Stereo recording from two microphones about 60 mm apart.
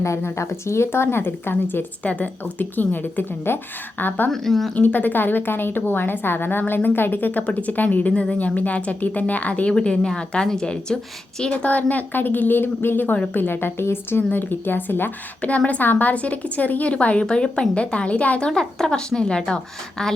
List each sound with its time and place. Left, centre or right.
0.3 s a woman's voice: left
2.0 s a woman's voice: left
4.3 s speech: centre
4.7 s a woman's voice: left; by 10.9 s centre
11.5 s a woman's voice: left
15.4 s a woman's voice: left